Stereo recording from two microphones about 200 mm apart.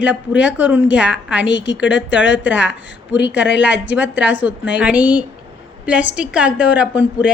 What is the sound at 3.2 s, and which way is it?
Speech, 60° left (ahead or behind).